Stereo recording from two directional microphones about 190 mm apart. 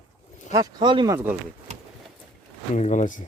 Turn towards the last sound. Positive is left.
turn(degrees=40)  # may be behind; listen again after turning